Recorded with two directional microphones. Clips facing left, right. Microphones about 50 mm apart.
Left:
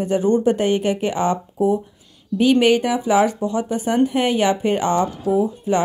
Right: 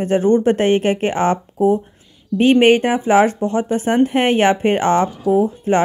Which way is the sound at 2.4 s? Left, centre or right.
Right.